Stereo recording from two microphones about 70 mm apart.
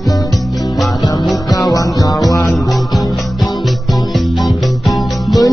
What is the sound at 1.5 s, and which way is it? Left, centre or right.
Music, left.